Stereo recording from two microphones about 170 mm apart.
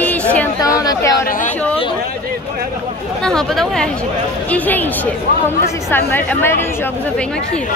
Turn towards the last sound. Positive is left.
turn(degrees=15)  # may be behind; listen again after turning